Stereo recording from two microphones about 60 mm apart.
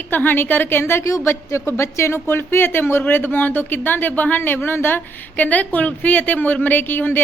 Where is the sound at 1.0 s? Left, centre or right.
Left.